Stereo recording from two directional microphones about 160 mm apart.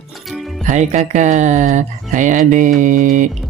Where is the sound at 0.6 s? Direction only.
50° right (ahead or behind).